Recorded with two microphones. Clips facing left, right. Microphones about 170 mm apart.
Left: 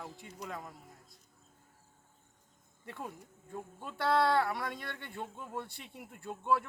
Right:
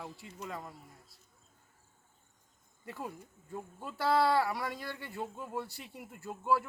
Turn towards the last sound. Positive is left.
turn(degrees=-5)  # may be behind; listen again after turning